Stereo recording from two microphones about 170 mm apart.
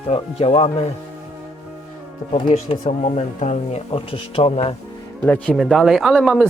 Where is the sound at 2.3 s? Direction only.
45° left (ahead or behind).